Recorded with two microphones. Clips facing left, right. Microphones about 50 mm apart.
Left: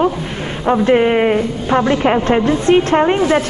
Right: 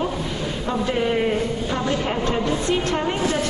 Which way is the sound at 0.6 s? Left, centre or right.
Left.